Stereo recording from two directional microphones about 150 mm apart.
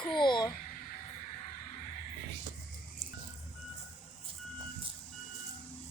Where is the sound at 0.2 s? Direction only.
30° left (ahead or behind).